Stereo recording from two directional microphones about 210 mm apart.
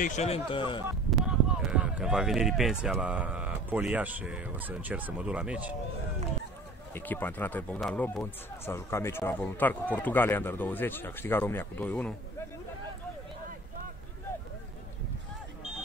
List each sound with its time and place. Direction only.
0.0 s a man's voice: 35° left (ahead or behind)
1.1 s a sound: 5° right (ahead or behind)
2.8 s speech: 5° right (ahead or behind)
6.9 s speech: 10° left (ahead or behind)